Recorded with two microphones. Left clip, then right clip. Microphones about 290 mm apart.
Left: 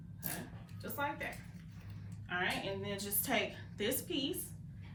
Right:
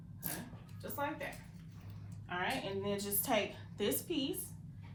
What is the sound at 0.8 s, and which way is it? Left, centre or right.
Speech, centre.